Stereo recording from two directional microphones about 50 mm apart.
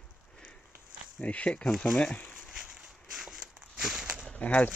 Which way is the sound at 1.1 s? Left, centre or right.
Left.